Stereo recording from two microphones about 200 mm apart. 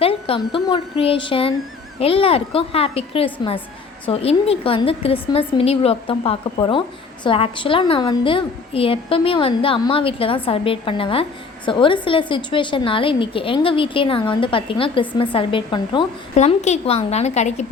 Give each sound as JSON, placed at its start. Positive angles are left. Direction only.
{"t": 0.0, "sound": "a woman's voice", "side_deg": 30}
{"t": 16.3, "sound": "a woman's voice", "side_deg": 35}